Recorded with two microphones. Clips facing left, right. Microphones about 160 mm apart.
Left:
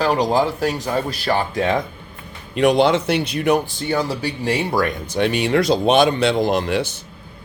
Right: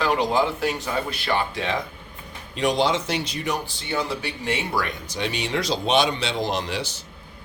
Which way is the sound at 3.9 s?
35° left (ahead or behind).